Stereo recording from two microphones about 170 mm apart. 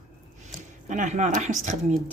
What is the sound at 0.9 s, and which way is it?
Speech, 45° right (ahead or behind).